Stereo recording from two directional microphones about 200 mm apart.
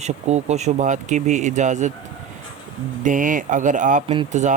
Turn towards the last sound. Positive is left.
turn(degrees=-35)  # may be behind; listen again after turning